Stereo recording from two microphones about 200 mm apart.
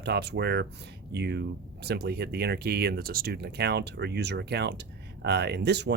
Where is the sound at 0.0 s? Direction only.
55° right (ahead or behind).